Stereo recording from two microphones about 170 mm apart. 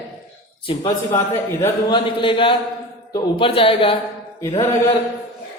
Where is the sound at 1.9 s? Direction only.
30° left (ahead or behind).